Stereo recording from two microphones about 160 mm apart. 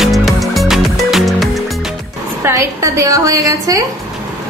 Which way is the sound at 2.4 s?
15° right (ahead or behind).